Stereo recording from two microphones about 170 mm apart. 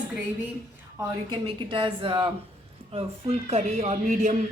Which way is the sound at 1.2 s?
30° right (ahead or behind).